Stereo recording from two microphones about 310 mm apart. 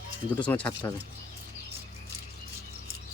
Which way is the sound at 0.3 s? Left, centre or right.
Centre.